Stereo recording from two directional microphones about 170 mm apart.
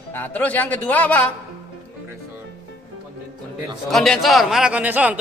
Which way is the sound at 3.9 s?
Centre (ahead or behind).